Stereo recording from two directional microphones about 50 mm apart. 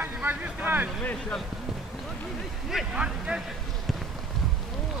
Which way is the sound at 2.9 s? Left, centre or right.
Right.